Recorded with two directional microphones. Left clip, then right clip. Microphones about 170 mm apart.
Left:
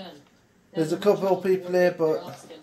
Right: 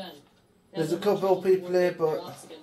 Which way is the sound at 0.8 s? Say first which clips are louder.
Left 3 dB; 50° left (ahead or behind).